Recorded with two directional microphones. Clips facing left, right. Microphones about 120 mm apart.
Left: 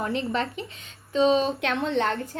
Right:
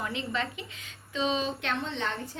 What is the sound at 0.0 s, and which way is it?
A woman's voice, 45° left (ahead or behind).